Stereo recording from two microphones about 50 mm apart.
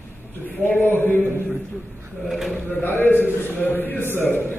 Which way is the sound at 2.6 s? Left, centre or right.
Left.